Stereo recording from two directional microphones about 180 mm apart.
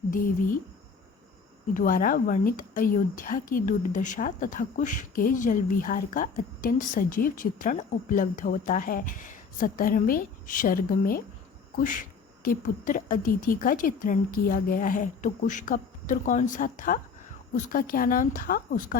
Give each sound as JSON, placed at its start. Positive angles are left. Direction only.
{"t": 1.7, "sound": "speech", "side_deg": 50}